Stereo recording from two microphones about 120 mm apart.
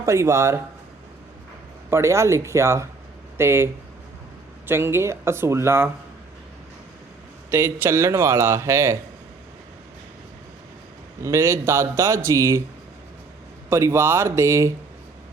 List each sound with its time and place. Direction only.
0.0 s speech: 25° right (ahead or behind)
1.9 s speech: 25° right (ahead or behind)
7.5 s speech: 20° right (ahead or behind)
11.2 s speech: 25° right (ahead or behind)
13.7 s speech: 20° right (ahead or behind)